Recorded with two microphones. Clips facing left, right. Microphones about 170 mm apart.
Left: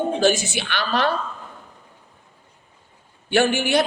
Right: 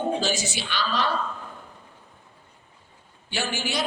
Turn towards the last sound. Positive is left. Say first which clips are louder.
# left 11 dB
turn(degrees=60)  # may be behind; listen again after turning